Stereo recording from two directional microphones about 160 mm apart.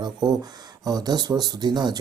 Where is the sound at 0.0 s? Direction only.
25° right (ahead or behind).